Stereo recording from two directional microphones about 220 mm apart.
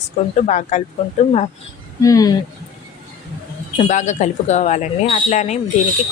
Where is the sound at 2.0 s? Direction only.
15° left (ahead or behind).